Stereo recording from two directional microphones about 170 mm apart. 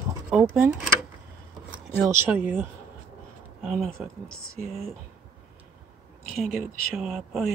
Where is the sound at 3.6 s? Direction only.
Centre (ahead or behind).